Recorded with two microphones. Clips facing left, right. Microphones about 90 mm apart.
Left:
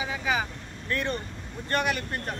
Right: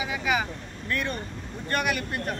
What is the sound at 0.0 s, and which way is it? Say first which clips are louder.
Vehicle: right 1 dB; 30° left (ahead or behind).